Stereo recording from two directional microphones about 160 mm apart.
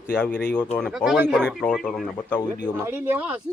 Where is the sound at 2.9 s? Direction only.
15° right (ahead or behind).